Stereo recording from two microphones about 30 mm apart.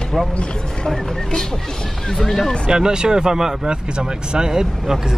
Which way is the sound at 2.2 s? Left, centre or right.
Centre.